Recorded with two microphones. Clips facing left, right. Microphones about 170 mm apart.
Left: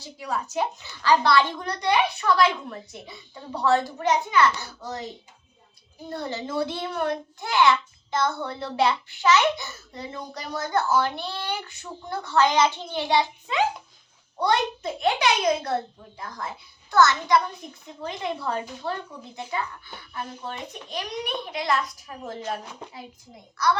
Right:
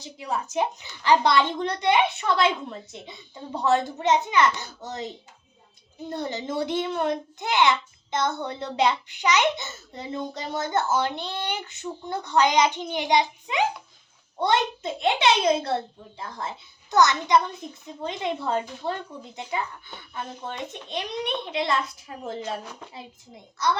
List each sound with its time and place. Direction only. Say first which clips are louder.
0.0 s a child's voice: even; 20° right (ahead or behind)
6.1 s a child's voice: right 1 dB; 20° right (ahead or behind)
20.1 s a child's voice: right 1 dB; 25° right (ahead or behind)
23.6 s a child's voice: left 2 dB; 20° right (ahead or behind)